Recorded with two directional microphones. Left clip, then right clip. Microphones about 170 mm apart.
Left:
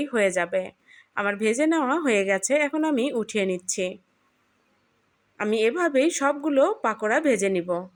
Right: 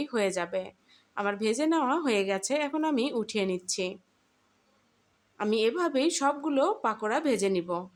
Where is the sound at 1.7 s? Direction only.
15° left (ahead or behind).